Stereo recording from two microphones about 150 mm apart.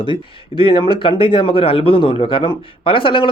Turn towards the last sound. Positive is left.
turn(degrees=35)  # may be behind; listen again after turning